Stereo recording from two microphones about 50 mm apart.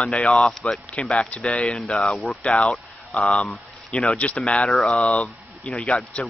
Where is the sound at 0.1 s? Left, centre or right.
Left.